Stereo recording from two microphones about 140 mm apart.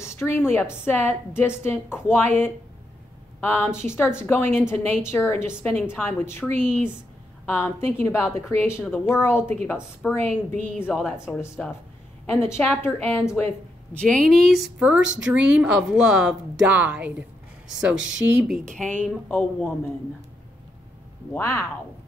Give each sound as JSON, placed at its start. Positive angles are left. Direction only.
{"t": 0.0, "sound": "a woman's voice", "side_deg": 20}
{"t": 10.0, "sound": "speech", "side_deg": 0}
{"t": 11.1, "sound": "a woman's voice", "side_deg": 20}
{"t": 13.9, "sound": "speech", "side_deg": 5}
{"t": 18.8, "sound": "a woman's voice", "side_deg": 10}
{"t": 21.3, "sound": "speech", "side_deg": 20}